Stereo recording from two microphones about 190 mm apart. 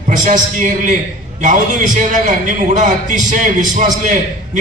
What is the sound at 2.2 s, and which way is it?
A man's voice, 40° right (ahead or behind).